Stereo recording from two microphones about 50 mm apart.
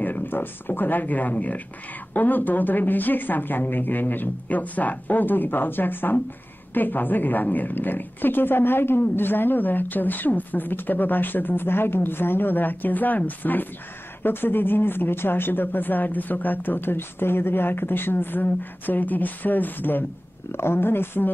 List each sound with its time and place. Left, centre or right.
0.0 s a woman's voice: left
20.5 s speech: left